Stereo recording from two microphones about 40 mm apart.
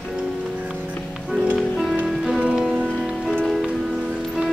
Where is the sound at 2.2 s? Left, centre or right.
Centre.